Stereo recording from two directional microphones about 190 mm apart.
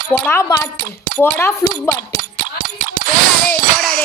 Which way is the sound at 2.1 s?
45° right (ahead or behind).